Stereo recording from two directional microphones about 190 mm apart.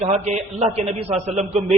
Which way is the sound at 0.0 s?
35° right (ahead or behind).